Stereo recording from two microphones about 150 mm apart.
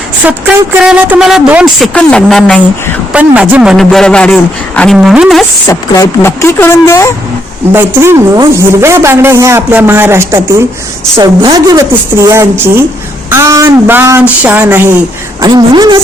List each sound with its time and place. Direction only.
0.3 s a woman's voice: 5° right (ahead or behind)
1.9 s a man's voice: 5° left (ahead or behind)
3.1 s a man's voice: 10° right (ahead or behind)
4.9 s a man's voice: 5° right (ahead or behind)
5.6 s speech: 20° left (ahead or behind)
7.7 s a woman's voice: 15° right (ahead or behind)
15.4 s a woman's voice: 30° right (ahead or behind)